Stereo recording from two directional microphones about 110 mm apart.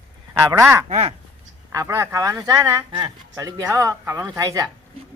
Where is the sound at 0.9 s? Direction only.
75° right (ahead or behind).